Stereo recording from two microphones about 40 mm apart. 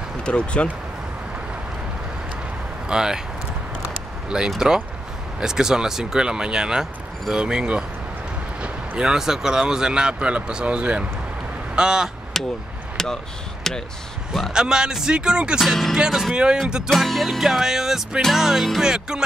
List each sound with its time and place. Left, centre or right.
0.2 s speech: left
2.9 s speech: centre
4.6 s speech: centre
12.4 s speech: centre
12.9 s a sound: centre
13.7 s speech: centre
14.5 s speech: centre
15.6 s speech: centre
16.6 s speech: centre
16.9 s speech: centre
18.8 s music: centre